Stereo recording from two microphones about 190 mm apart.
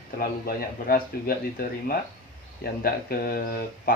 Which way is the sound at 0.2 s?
50° left (ahead or behind).